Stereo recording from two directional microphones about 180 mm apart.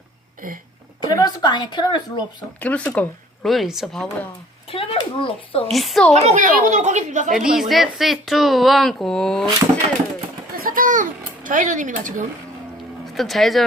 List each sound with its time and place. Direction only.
1.0 s speech: 20° left (ahead or behind)
2.6 s speech: 10° left (ahead or behind)
4.7 s speech: 30° left (ahead or behind)
5.7 s speech: centre (ahead or behind)
6.1 s speech: 40° right (ahead or behind)
7.3 s speech: centre (ahead or behind)
10.6 s a sound: 50° right (ahead or behind)
13.1 s speech: centre (ahead or behind)